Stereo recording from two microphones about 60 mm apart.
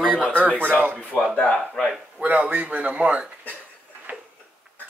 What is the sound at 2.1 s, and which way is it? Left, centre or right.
Speech, right.